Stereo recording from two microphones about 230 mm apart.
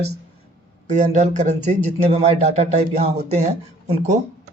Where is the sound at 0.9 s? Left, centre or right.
Right.